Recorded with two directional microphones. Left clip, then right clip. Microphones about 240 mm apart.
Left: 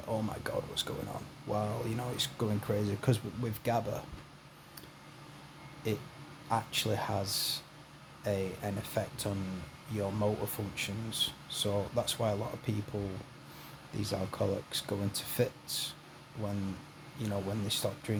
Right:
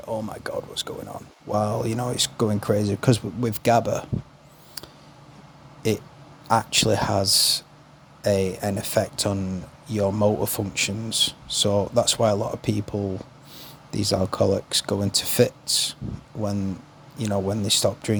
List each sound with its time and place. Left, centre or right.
0.1 s speech: right
5.8 s speech: right
13.9 s speech: right
17.2 s speech: right